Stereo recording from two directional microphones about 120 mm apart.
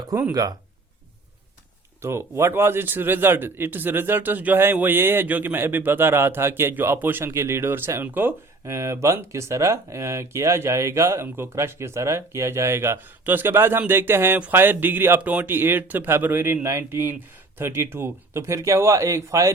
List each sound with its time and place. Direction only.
0.1 s speech: 25° right (ahead or behind)
2.0 s speech: 20° right (ahead or behind)